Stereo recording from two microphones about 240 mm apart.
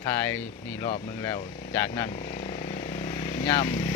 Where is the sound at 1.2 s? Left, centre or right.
Centre.